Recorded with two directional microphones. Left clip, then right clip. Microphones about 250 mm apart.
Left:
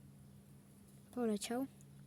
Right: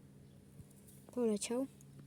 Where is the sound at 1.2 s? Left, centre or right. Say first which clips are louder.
Right 3 dB; centre.